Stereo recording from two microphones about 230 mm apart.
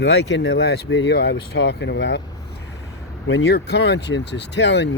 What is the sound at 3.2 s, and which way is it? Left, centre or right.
Speech, left.